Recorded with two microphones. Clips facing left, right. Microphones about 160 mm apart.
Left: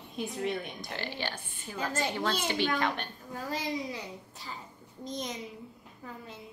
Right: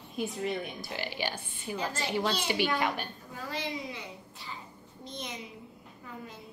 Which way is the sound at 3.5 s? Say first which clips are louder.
Left 2 dB; 40° left (ahead or behind).